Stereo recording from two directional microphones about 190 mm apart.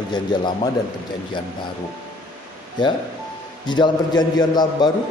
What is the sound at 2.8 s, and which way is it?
A man's voice, 25° left (ahead or behind).